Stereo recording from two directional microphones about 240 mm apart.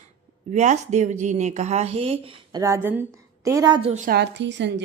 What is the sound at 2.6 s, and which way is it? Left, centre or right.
A woman's voice, centre.